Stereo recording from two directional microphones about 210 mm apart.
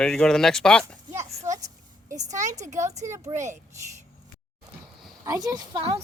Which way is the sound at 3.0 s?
15° right (ahead or behind).